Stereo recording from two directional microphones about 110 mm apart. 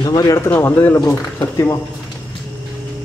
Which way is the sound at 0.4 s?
20° left (ahead or behind).